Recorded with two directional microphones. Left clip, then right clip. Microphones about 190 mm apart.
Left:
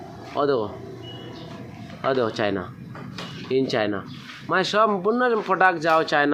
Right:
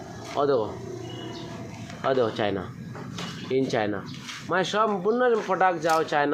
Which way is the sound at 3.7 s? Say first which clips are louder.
Left 3 dB; 15° left (ahead or behind).